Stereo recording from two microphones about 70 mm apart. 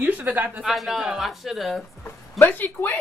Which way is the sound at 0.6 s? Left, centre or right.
Centre.